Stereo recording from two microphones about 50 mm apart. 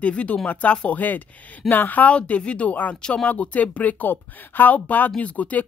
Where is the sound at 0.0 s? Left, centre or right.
Left.